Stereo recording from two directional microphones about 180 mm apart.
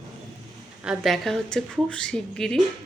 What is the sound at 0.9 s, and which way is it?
A woman's voice, centre (ahead or behind).